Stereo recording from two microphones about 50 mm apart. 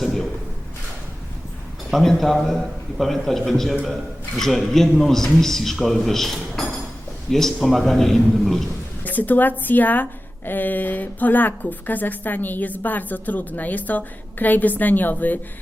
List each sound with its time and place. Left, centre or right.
0.0 s a sound: centre
1.9 s a man's voice: centre
9.0 s a woman's voice: left